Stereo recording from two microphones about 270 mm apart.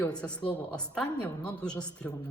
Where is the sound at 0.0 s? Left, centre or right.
Centre.